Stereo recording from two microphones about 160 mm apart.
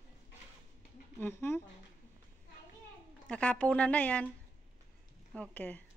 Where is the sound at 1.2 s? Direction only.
15° left (ahead or behind).